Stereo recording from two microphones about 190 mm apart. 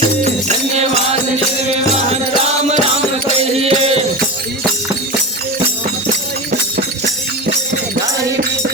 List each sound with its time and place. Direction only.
2.4 s music: 30° right (ahead or behind)